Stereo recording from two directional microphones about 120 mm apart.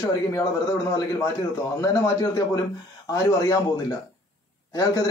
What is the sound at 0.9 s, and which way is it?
Speech, 30° left (ahead or behind).